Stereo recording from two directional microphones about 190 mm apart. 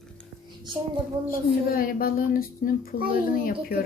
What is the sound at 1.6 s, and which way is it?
Speech, 50° left (ahead or behind).